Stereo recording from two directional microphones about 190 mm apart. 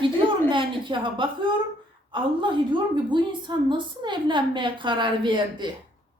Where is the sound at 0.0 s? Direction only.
25° right (ahead or behind).